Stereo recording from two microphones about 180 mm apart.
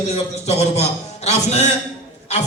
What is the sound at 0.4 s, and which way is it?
A man's voice, 35° left (ahead or behind).